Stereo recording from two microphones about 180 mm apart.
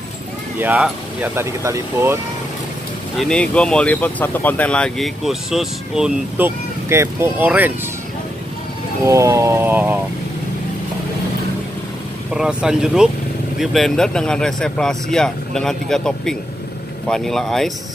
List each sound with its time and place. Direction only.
0.6 s speech: 5° right (ahead or behind)
3.2 s speech: 5° left (ahead or behind)
9.0 s speech: 15° right (ahead or behind)
12.4 s speech: 5° right (ahead or behind)